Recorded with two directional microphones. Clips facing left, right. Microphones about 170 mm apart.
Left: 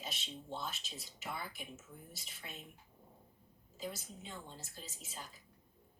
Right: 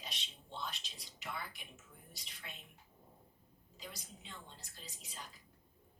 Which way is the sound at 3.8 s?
5° left (ahead or behind).